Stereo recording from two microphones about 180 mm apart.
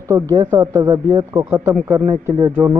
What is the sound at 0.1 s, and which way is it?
Speech, 15° right (ahead or behind).